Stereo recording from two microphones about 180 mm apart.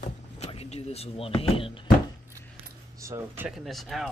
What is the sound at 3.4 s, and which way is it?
Speech, centre (ahead or behind).